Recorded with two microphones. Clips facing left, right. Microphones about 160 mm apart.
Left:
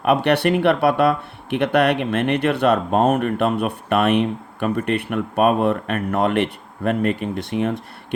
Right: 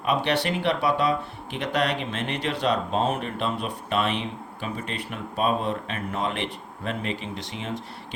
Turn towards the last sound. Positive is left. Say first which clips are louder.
# left 10 dB
turn(degrees=55)  # may be behind; listen again after turning